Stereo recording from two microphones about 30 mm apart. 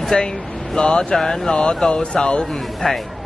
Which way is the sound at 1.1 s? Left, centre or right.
Centre.